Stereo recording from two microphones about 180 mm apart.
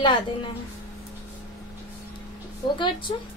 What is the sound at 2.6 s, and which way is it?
Speech, 25° left (ahead or behind).